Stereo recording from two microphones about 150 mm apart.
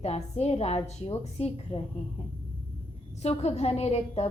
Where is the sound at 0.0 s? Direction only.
45° left (ahead or behind).